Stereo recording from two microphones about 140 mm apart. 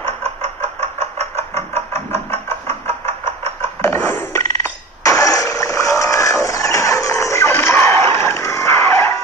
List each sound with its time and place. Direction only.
0.0 s chicken: 45° right (ahead or behind)
3.8 s a sound: 20° left (ahead or behind)
6.4 s music: 25° left (ahead or behind)